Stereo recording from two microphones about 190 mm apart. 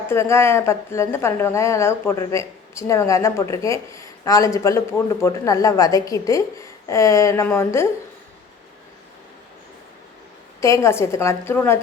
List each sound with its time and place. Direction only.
0.1 s a woman's voice: 15° left (ahead or behind)
10.6 s a woman's voice: 15° left (ahead or behind)